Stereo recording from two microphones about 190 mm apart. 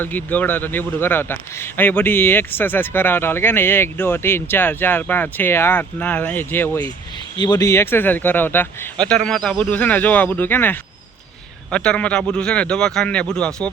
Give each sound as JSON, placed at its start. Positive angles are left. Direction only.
{"t": 0.0, "sound": "a man's voice", "side_deg": 10}
{"t": 7.3, "sound": "a man's voice", "side_deg": 20}